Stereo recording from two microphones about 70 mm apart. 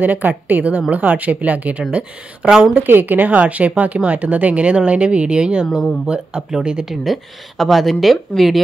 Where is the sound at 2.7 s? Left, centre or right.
Right; by 6.8 s centre.